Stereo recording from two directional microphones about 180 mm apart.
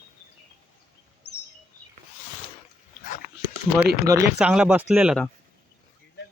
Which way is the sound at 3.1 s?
50° left (ahead or behind).